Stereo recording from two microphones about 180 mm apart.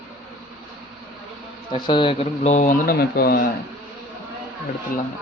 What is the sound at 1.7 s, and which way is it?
Speech, 25° left (ahead or behind).